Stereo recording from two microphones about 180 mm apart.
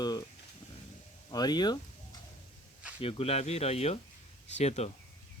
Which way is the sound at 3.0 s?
35° left (ahead or behind).